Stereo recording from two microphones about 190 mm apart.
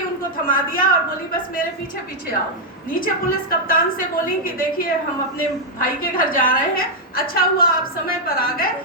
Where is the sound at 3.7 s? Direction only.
45° left (ahead or behind).